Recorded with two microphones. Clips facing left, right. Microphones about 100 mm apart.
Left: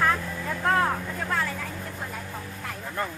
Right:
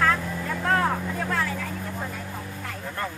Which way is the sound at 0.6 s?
Centre (ahead or behind).